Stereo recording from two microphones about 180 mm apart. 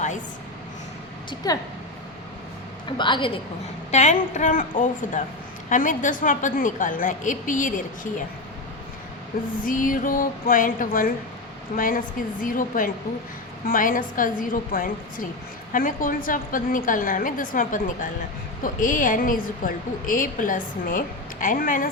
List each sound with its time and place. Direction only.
1.5 s a woman's voice: 20° left (ahead or behind)
3.0 s a woman's voice: 25° left (ahead or behind)
3.9 s a woman's voice: 40° left (ahead or behind)
9.6 s a woman's voice: 50° left (ahead or behind)